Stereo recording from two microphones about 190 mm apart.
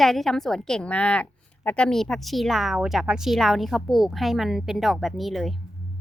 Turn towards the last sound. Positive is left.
turn(degrees=0)  # may be behind; listen again after turning